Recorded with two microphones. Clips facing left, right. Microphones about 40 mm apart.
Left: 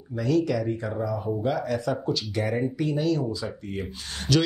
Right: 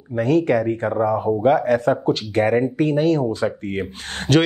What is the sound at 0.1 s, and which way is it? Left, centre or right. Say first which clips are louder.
Speech: right 7 dB; right.